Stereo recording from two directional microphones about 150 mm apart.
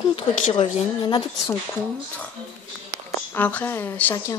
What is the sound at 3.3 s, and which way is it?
A woman's voice, 10° left (ahead or behind).